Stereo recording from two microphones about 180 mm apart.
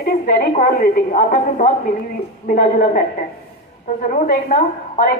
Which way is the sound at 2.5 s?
50° left (ahead or behind).